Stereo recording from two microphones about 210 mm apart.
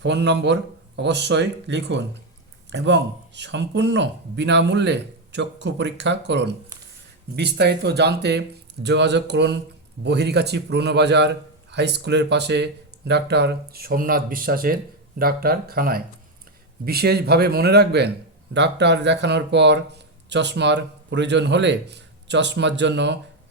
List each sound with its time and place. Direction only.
0.0 s speech: 55° right (ahead or behind)